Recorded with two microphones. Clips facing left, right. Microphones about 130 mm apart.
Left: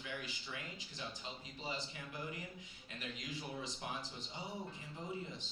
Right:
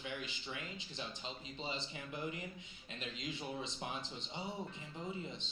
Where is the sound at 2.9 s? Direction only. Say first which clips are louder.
Right 2 dB; 20° right (ahead or behind).